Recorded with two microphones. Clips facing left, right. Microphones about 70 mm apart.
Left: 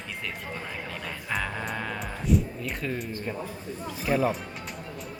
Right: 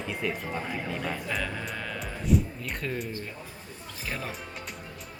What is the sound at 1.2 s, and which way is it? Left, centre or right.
Music, centre.